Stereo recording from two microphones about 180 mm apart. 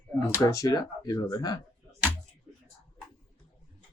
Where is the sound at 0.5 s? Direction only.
20° left (ahead or behind).